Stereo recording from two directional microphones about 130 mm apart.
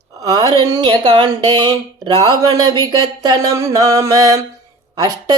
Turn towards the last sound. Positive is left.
turn(degrees=-30)  # may be behind; listen again after turning